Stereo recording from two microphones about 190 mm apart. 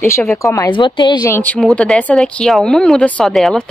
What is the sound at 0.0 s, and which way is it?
Speech, 15° left (ahead or behind).